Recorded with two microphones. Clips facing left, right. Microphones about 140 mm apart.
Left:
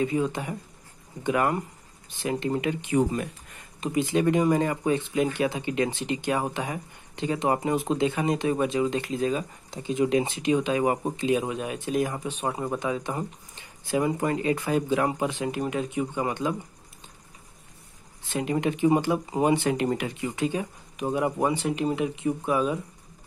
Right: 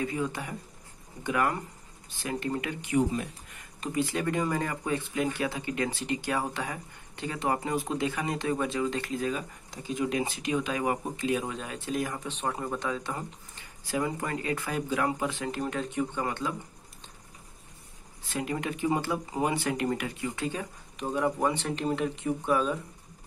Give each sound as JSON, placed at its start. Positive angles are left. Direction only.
{"t": 0.0, "sound": "speech", "side_deg": 20}
{"t": 18.3, "sound": "speech", "side_deg": 20}